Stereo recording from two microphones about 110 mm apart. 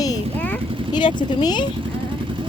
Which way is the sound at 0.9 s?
40° left (ahead or behind).